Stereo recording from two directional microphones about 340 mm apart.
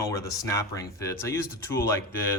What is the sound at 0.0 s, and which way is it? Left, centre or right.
Speech, centre.